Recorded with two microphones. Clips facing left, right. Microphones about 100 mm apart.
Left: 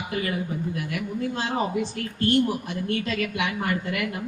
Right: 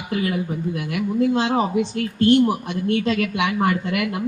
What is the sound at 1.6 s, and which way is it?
A woman's voice, 20° right (ahead or behind).